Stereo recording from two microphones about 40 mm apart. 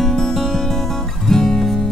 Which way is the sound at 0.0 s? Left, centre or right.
Centre.